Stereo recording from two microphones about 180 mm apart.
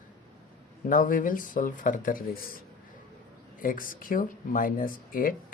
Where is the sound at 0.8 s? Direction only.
50° left (ahead or behind).